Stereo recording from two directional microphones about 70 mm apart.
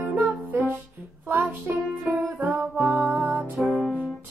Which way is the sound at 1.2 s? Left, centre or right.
Right.